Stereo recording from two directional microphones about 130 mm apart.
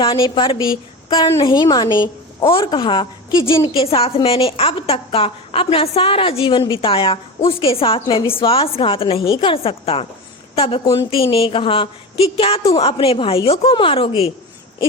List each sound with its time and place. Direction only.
0.0 s a woman's voice: 40° left (ahead or behind)